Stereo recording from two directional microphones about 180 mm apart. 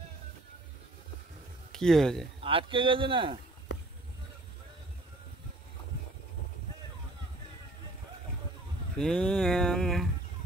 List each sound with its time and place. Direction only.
1.7 s speech: 5° left (ahead or behind)
2.4 s a man's voice: 30° right (ahead or behind)
8.9 s speech: centre (ahead or behind)